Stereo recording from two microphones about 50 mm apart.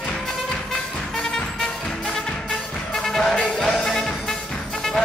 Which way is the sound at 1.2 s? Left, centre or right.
Centre.